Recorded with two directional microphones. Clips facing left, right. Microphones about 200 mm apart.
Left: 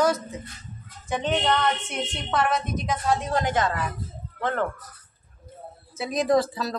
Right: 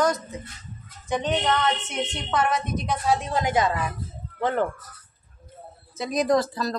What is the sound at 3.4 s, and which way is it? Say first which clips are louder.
Speech: right 5 dB; 10° right (ahead or behind).